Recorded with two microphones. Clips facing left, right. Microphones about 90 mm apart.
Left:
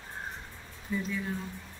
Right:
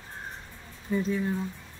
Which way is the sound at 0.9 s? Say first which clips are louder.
Right 5 dB; 40° right (ahead or behind).